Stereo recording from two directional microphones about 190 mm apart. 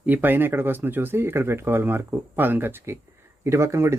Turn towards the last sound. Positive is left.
turn(degrees=-15)  # may be behind; listen again after turning